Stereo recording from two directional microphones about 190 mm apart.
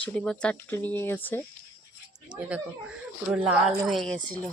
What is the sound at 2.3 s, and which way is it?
Speech, 5° right (ahead or behind).